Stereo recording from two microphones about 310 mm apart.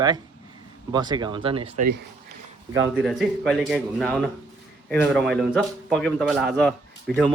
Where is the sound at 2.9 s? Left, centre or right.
Centre.